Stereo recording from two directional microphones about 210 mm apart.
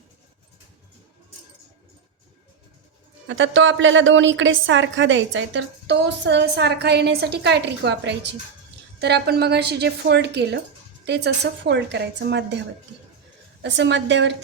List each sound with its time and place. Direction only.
3.2 s a woman's voice: 65° right (ahead or behind)
13.6 s a woman's voice: 55° right (ahead or behind)